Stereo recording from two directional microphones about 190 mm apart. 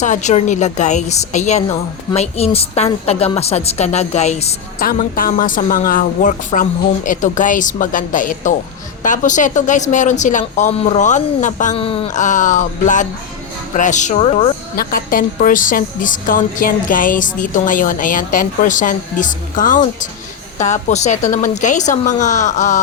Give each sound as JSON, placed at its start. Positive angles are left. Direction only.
{"t": 0.0, "sound": "speech", "side_deg": 40}
{"t": 4.8, "sound": "speech", "side_deg": 50}
{"t": 12.2, "sound": "speech", "side_deg": 40}
{"t": 14.8, "sound": "speech", "side_deg": 50}